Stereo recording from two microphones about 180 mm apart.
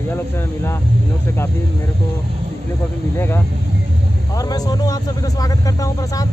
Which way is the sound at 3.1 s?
15° left (ahead or behind).